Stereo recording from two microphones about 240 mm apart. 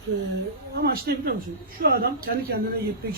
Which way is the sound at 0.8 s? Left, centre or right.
Right.